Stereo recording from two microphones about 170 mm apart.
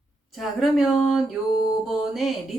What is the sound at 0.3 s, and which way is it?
Speech, centre (ahead or behind).